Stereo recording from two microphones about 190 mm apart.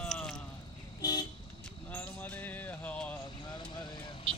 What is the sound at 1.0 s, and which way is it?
Vehicle, 20° left (ahead or behind).